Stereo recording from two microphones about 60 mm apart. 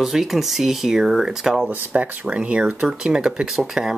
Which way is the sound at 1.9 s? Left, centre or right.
Right.